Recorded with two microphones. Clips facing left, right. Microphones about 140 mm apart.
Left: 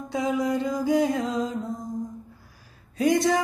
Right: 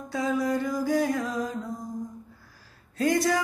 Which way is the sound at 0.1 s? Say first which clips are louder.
Left 1 dB; 20° left (ahead or behind).